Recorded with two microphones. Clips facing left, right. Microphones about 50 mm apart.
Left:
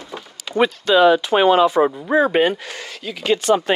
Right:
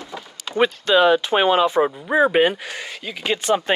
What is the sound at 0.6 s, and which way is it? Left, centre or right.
Speech, right.